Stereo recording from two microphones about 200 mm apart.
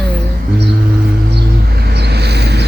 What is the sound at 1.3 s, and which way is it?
Vehicle, 55° right (ahead or behind).